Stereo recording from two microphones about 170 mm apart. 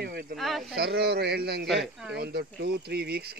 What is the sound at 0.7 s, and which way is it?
Speech, 70° right (ahead or behind).